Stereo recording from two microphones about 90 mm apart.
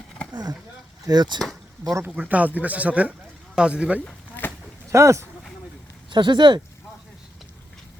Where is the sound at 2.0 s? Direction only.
15° right (ahead or behind).